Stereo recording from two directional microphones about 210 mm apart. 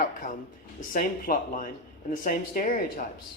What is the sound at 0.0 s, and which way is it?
Speech, 40° left (ahead or behind).